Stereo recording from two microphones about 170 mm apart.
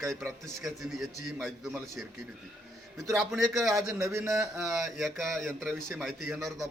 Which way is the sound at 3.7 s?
15° right (ahead or behind).